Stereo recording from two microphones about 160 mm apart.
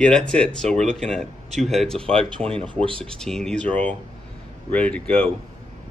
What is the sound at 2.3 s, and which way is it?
Speech, 35° right (ahead or behind).